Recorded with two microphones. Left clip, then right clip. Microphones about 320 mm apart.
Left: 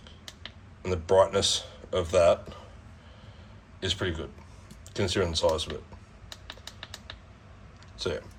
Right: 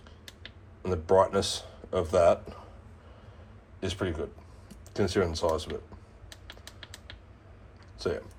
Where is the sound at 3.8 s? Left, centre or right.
Centre.